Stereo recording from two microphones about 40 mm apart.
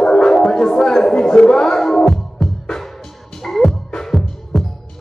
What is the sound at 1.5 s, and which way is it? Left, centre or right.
Music, centre.